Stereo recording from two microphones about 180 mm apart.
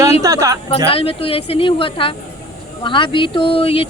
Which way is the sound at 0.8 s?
30° left (ahead or behind).